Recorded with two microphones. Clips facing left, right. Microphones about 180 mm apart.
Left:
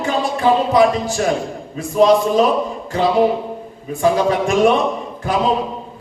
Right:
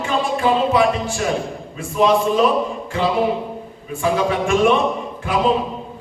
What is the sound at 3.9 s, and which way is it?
Music, 40° left (ahead or behind).